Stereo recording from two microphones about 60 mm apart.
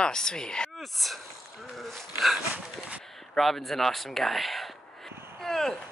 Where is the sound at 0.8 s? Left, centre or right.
Centre.